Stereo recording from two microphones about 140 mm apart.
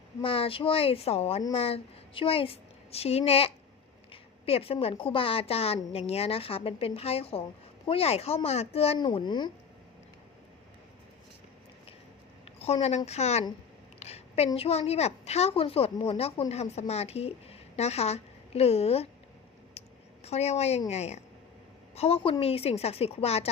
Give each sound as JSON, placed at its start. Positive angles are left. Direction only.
{"t": 0.2, "sound": "a woman's voice", "side_deg": 40}
{"t": 9.1, "sound": "speech", "side_deg": 35}
{"t": 12.5, "sound": "a woman's voice", "side_deg": 50}
{"t": 20.2, "sound": "a woman's voice", "side_deg": 50}